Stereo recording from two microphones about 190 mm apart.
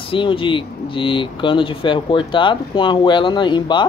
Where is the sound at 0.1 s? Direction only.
25° left (ahead or behind).